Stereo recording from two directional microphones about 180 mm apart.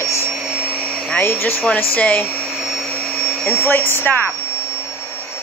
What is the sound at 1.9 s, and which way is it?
Vacuum cleaner, 5° left (ahead or behind).